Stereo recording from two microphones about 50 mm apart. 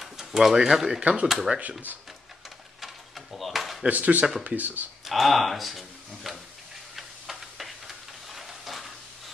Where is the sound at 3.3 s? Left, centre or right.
Centre.